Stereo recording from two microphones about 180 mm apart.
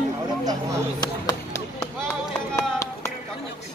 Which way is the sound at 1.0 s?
20° left (ahead or behind).